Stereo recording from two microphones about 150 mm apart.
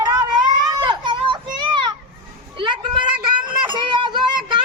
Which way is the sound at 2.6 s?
30° right (ahead or behind).